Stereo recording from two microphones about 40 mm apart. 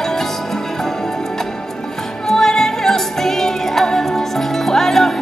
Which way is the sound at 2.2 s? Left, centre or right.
Centre.